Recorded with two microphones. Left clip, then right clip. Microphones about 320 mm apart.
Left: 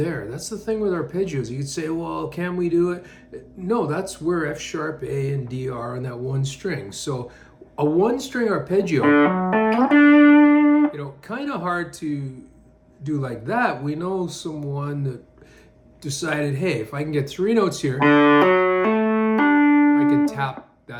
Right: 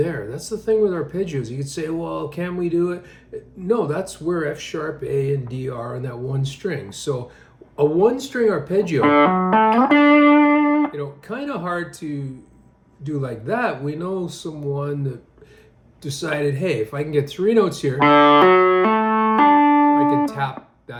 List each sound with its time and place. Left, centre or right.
0.0 s speech: centre
9.0 s speech: right
10.9 s speech: centre
18.0 s music: right
20.1 s guitar: centre